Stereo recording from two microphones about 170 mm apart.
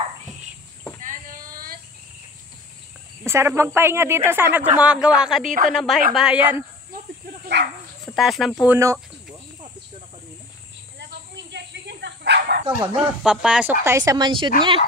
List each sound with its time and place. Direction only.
1.0 s a sound: 55° right (ahead or behind)
3.3 s speech: 15° right (ahead or behind)
7.4 s dog: 65° right (ahead or behind)
8.1 s speech: centre (ahead or behind)
8.6 s speech: 15° right (ahead or behind)
11.0 s bow-wow: 90° right; by 12.6 s 70° right (ahead or behind)
13.0 s speech: 5° right (ahead or behind); by 14.5 s 25° right (ahead or behind)